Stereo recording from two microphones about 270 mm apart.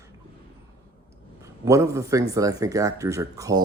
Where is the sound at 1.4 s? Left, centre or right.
Centre.